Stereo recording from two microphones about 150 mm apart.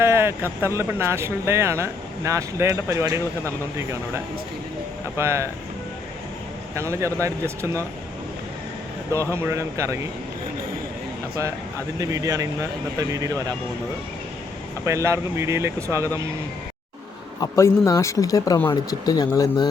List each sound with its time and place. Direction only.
0.0 s speech: 15° right (ahead or behind)
5.1 s speech: 20° right (ahead or behind)
6.7 s speech: 20° right (ahead or behind)
9.3 s speech: 15° right (ahead or behind)
11.9 s speech: 25° right (ahead or behind)
14.8 s speech: 20° right (ahead or behind)
17.4 s speech: 20° left (ahead or behind)